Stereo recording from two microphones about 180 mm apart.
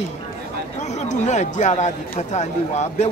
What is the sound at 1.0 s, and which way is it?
Speech, 40° left (ahead or behind).